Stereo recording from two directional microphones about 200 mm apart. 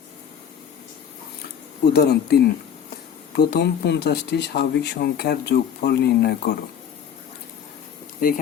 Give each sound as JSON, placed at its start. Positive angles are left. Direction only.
{"t": 1.8, "sound": "speech", "side_deg": 55}